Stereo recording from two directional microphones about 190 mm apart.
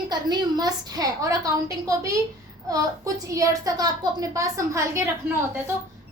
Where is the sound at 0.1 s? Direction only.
20° right (ahead or behind).